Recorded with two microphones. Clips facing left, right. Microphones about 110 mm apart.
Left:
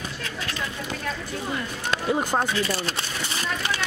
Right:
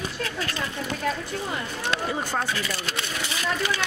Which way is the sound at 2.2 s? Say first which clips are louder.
Left 4 dB; 15° left (ahead or behind).